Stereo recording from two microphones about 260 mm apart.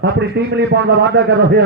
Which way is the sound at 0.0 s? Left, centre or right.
Right.